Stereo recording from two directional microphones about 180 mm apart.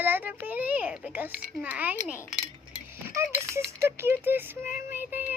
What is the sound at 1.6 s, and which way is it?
Child singing, 10° right (ahead or behind).